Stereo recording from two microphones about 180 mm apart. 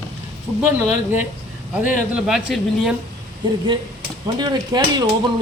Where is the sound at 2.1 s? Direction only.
5° right (ahead or behind).